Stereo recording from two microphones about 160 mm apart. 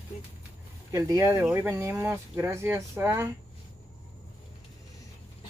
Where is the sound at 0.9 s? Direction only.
20° right (ahead or behind).